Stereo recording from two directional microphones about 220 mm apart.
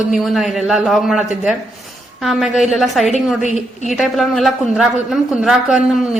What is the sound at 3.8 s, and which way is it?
A woman's voice, centre (ahead or behind).